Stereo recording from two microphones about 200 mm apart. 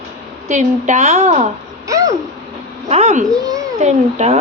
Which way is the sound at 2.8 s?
35° right (ahead or behind).